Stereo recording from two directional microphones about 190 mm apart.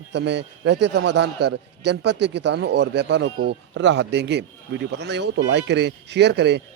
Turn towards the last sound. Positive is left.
turn(degrees=-65)  # may be behind; listen again after turning